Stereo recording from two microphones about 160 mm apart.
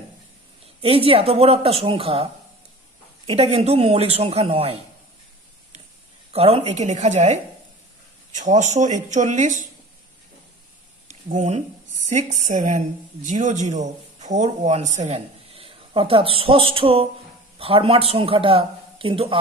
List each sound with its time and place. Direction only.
0.7 s a man's voice: 35° right (ahead or behind)
3.3 s a man's voice: 40° right (ahead or behind)
6.3 s speech: 40° right (ahead or behind)
8.4 s speech: 50° right (ahead or behind)
11.1 s a man's voice: 50° right (ahead or behind)